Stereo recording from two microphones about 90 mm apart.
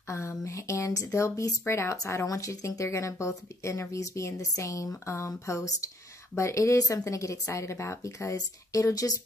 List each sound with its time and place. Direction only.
0.1 s speech: 30° left (ahead or behind)